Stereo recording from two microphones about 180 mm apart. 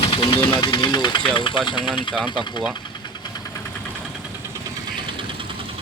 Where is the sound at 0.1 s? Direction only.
25° left (ahead or behind).